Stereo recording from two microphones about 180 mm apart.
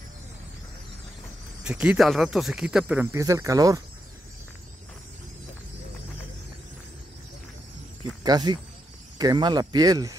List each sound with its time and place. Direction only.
1.6 s speech: 5° right (ahead or behind)
8.2 s speech: 20° right (ahead or behind)